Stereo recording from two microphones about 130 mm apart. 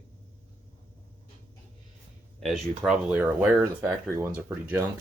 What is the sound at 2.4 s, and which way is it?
Speech, centre (ahead or behind).